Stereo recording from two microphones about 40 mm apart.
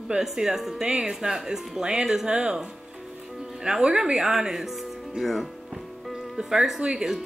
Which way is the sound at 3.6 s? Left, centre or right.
Centre.